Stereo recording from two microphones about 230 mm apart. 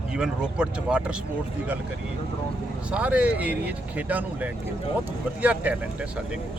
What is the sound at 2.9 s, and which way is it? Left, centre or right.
Speech, centre.